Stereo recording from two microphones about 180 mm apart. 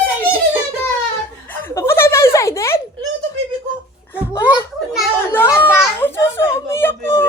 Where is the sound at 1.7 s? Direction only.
15° left (ahead or behind).